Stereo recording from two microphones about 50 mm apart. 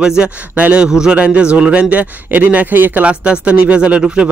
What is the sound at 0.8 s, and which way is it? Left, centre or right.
A man's voice, centre.